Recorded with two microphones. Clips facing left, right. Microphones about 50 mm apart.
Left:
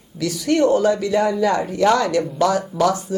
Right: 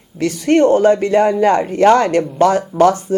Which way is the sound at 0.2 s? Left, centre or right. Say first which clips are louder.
Right 5 dB; right.